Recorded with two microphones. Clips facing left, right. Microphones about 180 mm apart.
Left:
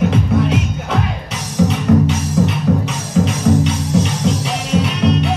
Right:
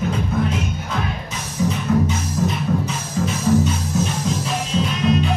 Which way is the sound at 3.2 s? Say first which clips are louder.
Left 2 dB; 90° left.